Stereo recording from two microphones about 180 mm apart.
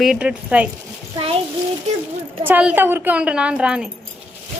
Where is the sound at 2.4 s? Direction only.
10° right (ahead or behind).